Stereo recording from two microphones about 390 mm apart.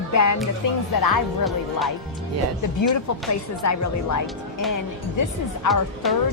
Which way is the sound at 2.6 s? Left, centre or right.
Left.